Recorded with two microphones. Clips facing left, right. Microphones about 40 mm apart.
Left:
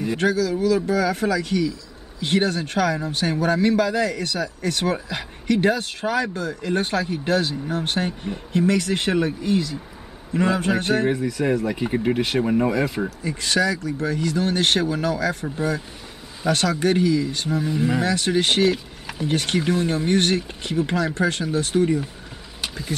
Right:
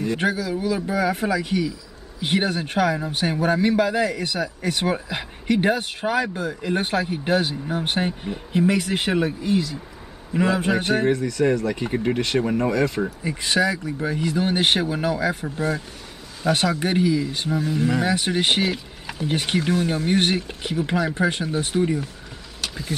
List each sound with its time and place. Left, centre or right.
0.2 s a man's voice: centre
11.1 s speech: centre
13.2 s a man's voice: centre
15.4 s a man's voice: centre
17.5 s speech: centre
18.0 s speech: centre
20.1 s a man's voice: centre